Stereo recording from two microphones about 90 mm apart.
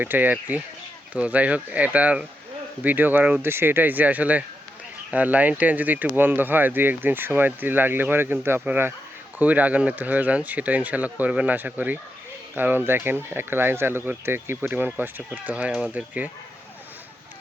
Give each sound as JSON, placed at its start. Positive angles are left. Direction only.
{"t": 0.0, "sound": "speech", "side_deg": -20}